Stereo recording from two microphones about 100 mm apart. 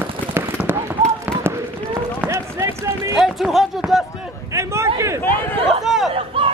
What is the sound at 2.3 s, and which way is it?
Run, 30° right (ahead or behind).